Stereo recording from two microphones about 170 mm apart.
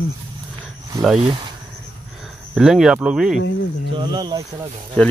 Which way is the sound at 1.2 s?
30° right (ahead or behind).